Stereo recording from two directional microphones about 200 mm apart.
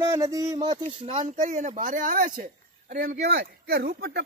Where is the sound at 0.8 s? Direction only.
30° right (ahead or behind).